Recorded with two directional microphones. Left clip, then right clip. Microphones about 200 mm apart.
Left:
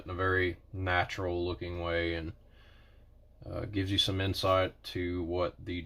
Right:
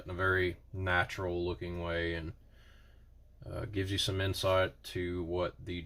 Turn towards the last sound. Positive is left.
turn(degrees=25)  # may be behind; listen again after turning